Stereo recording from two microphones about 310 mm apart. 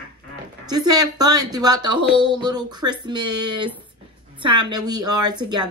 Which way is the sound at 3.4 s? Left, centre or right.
Right.